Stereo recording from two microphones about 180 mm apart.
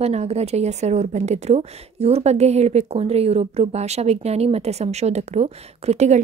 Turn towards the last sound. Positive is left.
turn(degrees=-35)  # may be behind; listen again after turning